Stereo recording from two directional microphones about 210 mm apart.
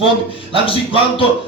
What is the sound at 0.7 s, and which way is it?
Music, 25° left (ahead or behind).